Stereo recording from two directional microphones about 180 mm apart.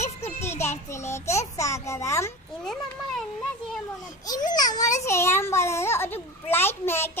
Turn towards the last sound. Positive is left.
turn(degrees=10)  # may be behind; listen again after turning